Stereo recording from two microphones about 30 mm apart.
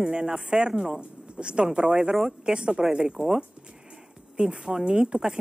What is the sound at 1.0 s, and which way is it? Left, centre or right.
A woman's voice, right.